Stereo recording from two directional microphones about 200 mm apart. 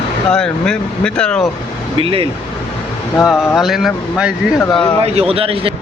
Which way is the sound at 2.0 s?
25° right (ahead or behind).